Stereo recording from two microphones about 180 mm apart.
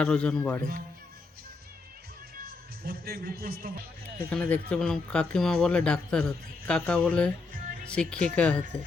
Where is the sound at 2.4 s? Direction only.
55° right (ahead or behind).